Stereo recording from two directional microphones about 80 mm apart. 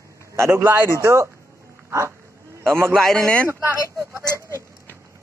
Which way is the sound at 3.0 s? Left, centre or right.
Centre.